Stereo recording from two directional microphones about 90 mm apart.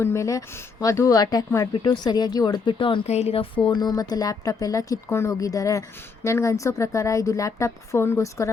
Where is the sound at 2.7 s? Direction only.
70° left (ahead or behind).